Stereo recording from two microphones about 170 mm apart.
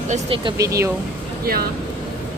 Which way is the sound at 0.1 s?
30° right (ahead or behind).